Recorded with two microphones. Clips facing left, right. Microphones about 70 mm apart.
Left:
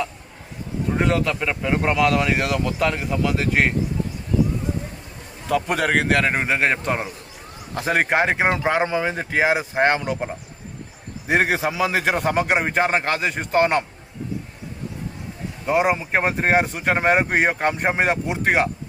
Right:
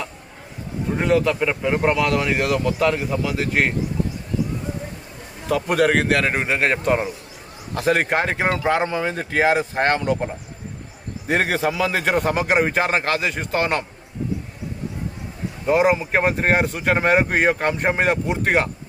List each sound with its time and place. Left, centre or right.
0.9 s speech: centre
5.5 s speech: centre
11.3 s speech: centre
15.6 s speech: centre